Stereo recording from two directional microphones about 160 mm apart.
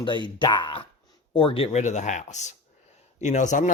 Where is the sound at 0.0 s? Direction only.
30° left (ahead or behind).